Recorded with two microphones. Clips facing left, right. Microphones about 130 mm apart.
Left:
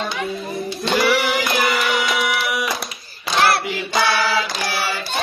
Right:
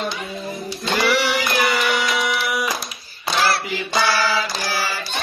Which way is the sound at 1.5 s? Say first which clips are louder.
Even; centre (ahead or behind).